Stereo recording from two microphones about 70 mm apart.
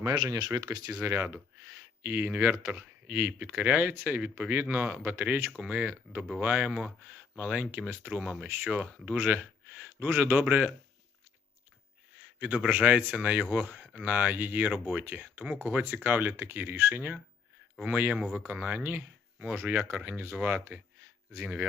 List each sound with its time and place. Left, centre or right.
0.0 s speech: right
12.1 s speech: right